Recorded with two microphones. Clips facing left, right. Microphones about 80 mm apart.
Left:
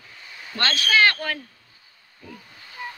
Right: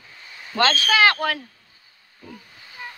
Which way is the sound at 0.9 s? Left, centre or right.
Right.